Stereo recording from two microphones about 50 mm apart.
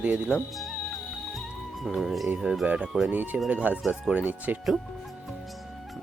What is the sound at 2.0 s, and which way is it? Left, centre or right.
Speech, centre.